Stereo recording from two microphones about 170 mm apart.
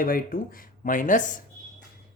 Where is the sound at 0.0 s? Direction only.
55° left (ahead or behind).